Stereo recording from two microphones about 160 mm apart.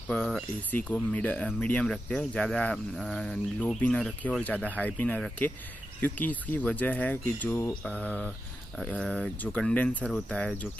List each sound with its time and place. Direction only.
0.1 s speech: 10° left (ahead or behind)